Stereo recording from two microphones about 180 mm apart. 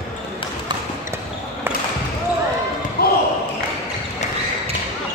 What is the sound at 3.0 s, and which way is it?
Basketball bounce, 60° left (ahead or behind).